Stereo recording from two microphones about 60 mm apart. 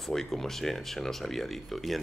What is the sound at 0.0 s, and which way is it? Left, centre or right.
A man's voice, centre.